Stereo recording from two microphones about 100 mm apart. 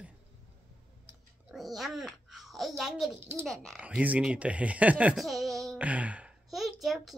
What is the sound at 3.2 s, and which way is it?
Speech, 20° right (ahead or behind).